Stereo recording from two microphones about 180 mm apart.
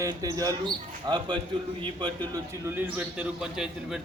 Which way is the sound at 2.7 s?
10° right (ahead or behind).